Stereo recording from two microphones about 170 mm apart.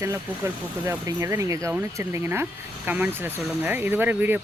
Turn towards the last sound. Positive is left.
turn(degrees=-10)  # may be behind; listen again after turning